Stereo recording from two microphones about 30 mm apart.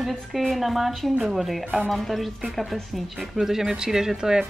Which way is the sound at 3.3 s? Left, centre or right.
Centre.